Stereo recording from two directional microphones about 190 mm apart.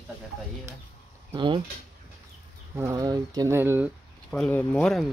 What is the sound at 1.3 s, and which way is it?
Speech, 25° right (ahead or behind).